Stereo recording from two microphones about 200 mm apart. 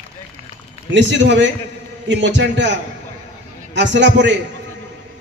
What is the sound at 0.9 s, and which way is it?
A man's voice, 65° right (ahead or behind).